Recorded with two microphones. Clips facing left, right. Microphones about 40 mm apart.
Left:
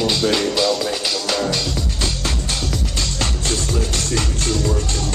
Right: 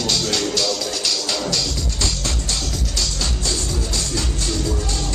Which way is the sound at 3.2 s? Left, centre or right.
Left.